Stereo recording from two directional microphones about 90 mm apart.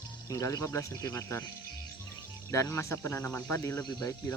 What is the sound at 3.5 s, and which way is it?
Speech, 30° left (ahead or behind).